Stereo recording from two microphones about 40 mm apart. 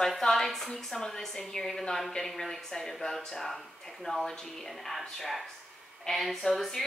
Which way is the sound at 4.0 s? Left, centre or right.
Centre.